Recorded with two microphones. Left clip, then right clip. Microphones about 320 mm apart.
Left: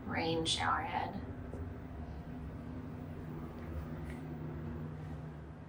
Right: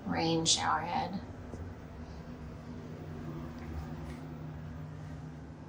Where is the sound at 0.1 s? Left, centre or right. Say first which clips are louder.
Right 4 dB; centre.